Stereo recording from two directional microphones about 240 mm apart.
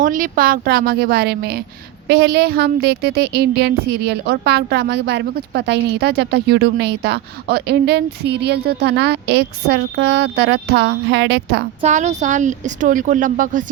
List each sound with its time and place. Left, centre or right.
0.0 s a woman's voice: right
11.8 s speech: right